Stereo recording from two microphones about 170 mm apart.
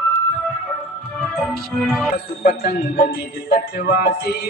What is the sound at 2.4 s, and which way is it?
Speech, 65° left (ahead or behind).